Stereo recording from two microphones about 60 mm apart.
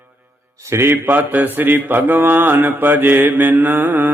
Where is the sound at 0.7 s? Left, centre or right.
Right.